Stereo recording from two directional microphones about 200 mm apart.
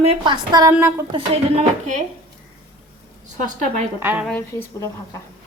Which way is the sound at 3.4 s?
40° right (ahead or behind).